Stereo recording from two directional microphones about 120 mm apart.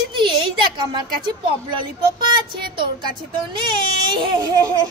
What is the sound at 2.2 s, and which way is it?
Speech, 40° right (ahead or behind).